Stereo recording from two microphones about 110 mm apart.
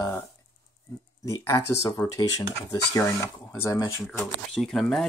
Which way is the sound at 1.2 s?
25° left (ahead or behind).